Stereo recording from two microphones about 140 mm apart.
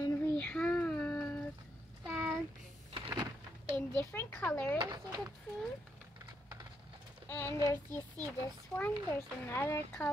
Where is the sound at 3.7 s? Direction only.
15° left (ahead or behind).